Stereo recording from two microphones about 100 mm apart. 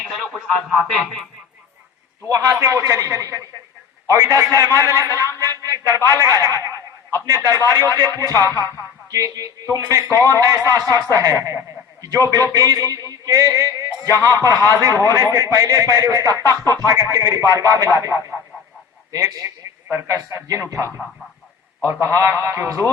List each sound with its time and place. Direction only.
0.0 s speech: centre (ahead or behind)
2.3 s music: 30° right (ahead or behind)
19.9 s speech: 25° right (ahead or behind)
20.3 s music: 30° right (ahead or behind)
22.0 s speech: 30° right (ahead or behind)